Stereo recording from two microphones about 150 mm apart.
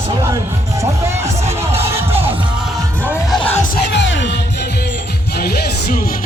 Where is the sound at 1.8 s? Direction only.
15° right (ahead or behind).